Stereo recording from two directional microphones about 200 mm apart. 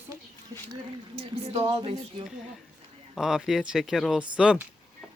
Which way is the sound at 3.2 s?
Centre (ahead or behind).